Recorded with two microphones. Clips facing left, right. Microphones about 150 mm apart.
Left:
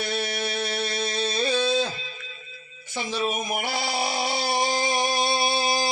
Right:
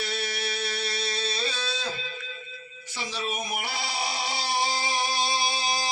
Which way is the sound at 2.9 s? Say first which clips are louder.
Left 6 dB; 50° left (ahead or behind).